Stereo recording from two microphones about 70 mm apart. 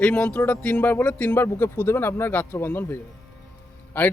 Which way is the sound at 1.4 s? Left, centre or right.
Left.